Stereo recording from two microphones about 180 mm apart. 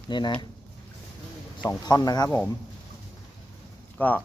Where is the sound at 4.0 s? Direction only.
10° left (ahead or behind).